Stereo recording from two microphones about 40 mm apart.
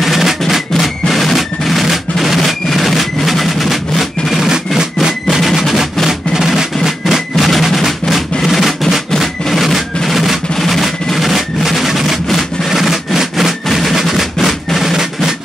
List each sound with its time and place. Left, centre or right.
0.0 s music: centre
1.0 s drum: centre
4.4 s music: centre
5.3 s music: centre
10.0 s drum: centre
10.5 s a sound: centre
12.3 s music: centre